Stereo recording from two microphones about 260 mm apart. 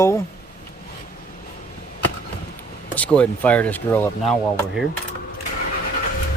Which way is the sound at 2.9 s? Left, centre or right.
Centre.